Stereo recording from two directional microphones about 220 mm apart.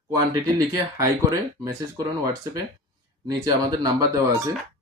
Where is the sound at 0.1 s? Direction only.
15° right (ahead or behind).